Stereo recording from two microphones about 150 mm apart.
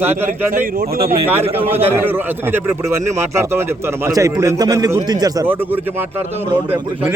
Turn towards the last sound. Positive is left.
turn(degrees=-10)  # may be behind; listen again after turning